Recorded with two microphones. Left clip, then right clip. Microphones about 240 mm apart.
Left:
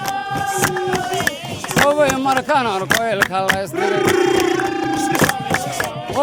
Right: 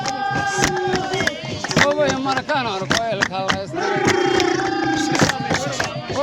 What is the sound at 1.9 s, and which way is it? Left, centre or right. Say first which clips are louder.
Speech: left 4 dB; left.